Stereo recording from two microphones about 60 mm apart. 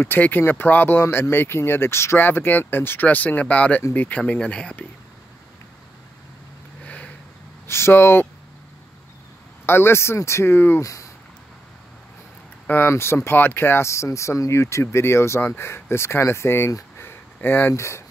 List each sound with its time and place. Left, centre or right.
0.0 s speech: left
2.1 s speech: left
4.3 s speech: centre
6.8 s a sound: left
7.6 s speech: left
9.7 s speech: left
10.8 s speech: left
12.6 s speech: left
12.9 s speech: left
17.0 s a sound: left
17.7 s speech: left